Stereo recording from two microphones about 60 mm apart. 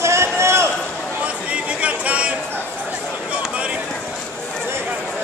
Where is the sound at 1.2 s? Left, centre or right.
Right.